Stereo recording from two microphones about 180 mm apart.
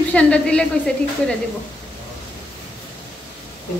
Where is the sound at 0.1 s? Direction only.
5° left (ahead or behind).